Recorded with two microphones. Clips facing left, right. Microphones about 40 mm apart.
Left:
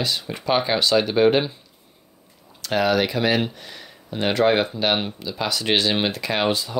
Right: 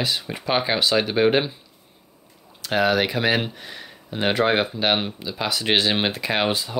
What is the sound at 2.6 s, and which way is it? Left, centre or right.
Speech, centre.